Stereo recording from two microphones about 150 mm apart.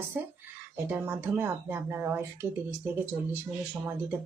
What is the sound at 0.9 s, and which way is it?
Speech, 15° right (ahead or behind).